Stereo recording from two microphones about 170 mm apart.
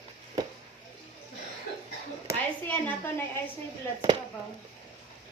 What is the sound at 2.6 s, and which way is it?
Speech, 10° left (ahead or behind).